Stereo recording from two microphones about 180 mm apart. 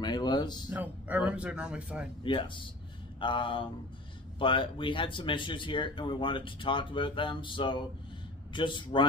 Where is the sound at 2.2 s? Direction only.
25° left (ahead or behind).